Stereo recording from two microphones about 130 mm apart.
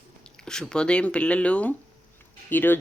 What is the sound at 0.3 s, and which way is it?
Speech, 5° left (ahead or behind).